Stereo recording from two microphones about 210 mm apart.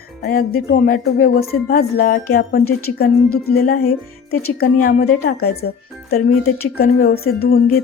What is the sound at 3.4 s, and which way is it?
Speech, 45° left (ahead or behind).